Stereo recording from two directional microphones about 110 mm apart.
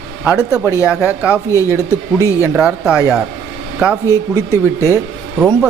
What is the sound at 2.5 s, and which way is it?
Speech, 5° right (ahead or behind).